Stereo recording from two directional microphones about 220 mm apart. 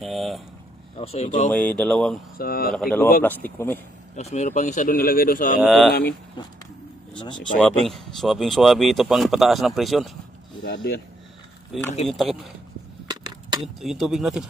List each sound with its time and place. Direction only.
0.0 s speech: centre (ahead or behind)
0.9 s speech: 25° left (ahead or behind)
1.5 s speech: 5° left (ahead or behind)
2.3 s speech: 45° left (ahead or behind)
2.7 s speech: 5° left (ahead or behind)
4.1 s a man's voice: 30° left (ahead or behind)
5.6 s speech: centre (ahead or behind)
5.9 s speech: 45° left (ahead or behind)
6.4 s speech: 20° left (ahead or behind)
7.9 s speech: centre (ahead or behind)
10.6 s speech: 50° left (ahead or behind)
11.7 s speech: centre (ahead or behind)
13.1 s a sound: 20° right (ahead or behind)
13.7 s speech: centre (ahead or behind)